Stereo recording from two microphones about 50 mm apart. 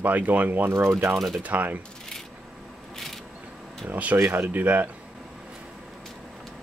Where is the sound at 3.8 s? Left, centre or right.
Right.